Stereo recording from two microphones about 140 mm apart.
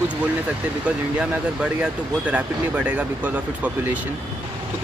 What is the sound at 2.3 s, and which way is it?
Speech, 10° right (ahead or behind).